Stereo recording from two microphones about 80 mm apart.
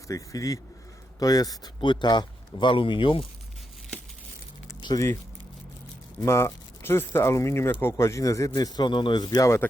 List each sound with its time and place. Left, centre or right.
0.1 s speech: left
1.8 s speech: left
4.8 s keys jangling: left
6.1 s speech: left